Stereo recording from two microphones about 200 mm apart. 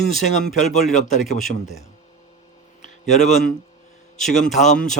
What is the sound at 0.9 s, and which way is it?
Speech, 35° left (ahead or behind).